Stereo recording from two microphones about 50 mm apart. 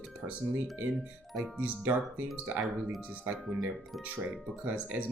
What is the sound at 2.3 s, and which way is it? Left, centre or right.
Speech, centre.